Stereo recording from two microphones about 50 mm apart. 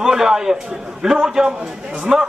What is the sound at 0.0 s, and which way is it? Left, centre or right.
A man's voice, centre.